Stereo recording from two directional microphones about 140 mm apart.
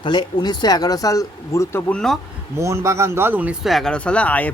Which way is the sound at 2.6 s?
20° right (ahead or behind).